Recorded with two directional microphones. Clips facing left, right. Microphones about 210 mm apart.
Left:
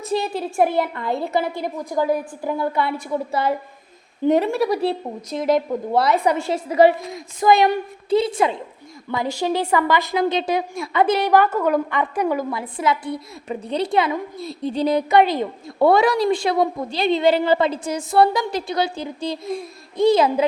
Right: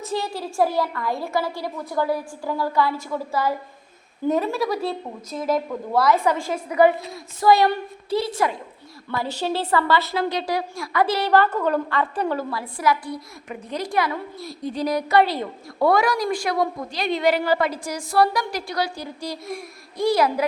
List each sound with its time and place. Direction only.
0.2 s a woman's voice: 20° left (ahead or behind)
4.7 s a woman's voice: 65° left (ahead or behind)
5.5 s a woman's voice: 20° left (ahead or behind)